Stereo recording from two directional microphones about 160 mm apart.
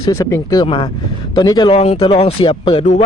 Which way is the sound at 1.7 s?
40° left (ahead or behind).